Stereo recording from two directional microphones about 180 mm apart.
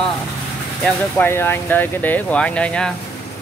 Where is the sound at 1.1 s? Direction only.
10° left (ahead or behind).